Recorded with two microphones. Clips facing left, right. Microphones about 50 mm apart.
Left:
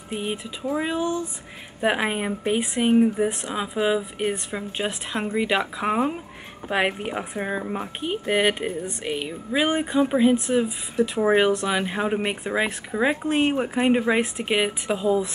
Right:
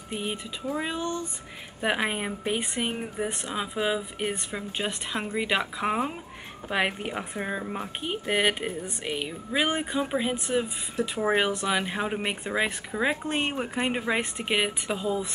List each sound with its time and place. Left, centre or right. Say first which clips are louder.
0.1 s music: left 3 dB; centre
1.8 s speech: left 4 dB; centre
6.7 s music: left 4 dB; centre
8.0 s speech: left 4 dB; centre